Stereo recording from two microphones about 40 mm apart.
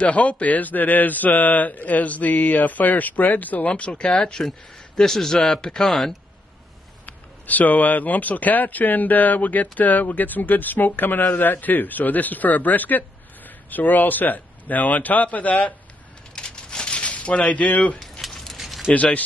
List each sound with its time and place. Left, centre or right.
0.0 s speech: left
3.9 s a man's voice: left
4.9 s a man's voice: centre
7.1 s speech: left
16.3 s a sound: centre; by 17.9 s left
18.2 s a sound: centre
18.9 s speech: left